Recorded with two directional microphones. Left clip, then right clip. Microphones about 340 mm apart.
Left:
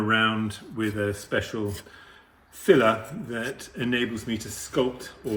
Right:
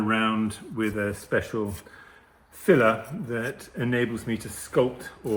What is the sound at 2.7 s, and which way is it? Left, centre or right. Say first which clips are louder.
Speech: left 1 dB; centre.